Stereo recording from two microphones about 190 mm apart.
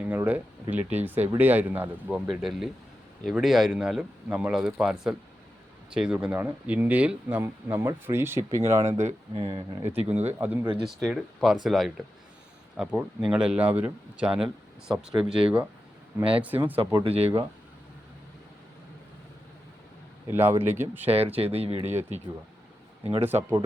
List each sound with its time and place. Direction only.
0.1 s speech: 10° right (ahead or behind)
9.0 s speech: 30° right (ahead or behind)
9.8 s speech: 10° right (ahead or behind)
16.7 s speech: 25° right (ahead or behind)
20.2 s speech: 10° right (ahead or behind)
21.3 s speech: 30° right (ahead or behind)
23.2 s speech: 10° right (ahead or behind)